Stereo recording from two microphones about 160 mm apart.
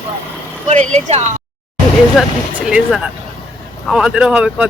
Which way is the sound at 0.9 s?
45° right (ahead or behind).